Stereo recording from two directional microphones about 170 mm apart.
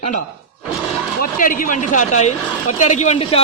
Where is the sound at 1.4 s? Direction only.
55° left (ahead or behind).